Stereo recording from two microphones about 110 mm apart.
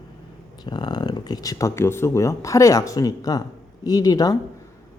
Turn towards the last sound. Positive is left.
turn(degrees=35)  # may be behind; listen again after turning